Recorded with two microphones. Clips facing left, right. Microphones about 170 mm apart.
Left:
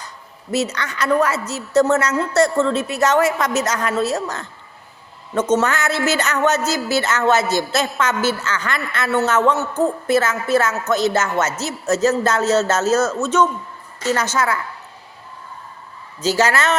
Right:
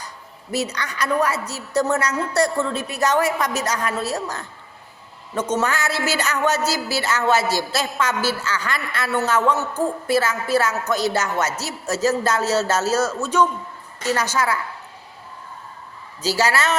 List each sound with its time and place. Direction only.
0.5 s a woman's voice: 15° right (ahead or behind)
14.3 s a woman's voice: 35° right (ahead or behind)
16.2 s a woman's voice: 10° right (ahead or behind)